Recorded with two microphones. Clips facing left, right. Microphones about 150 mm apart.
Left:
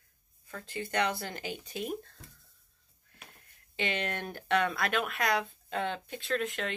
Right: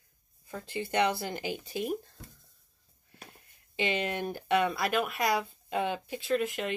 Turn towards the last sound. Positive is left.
turn(degrees=-5)  # may be behind; listen again after turning